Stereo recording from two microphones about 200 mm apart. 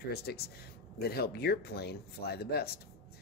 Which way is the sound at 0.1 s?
50° left (ahead or behind).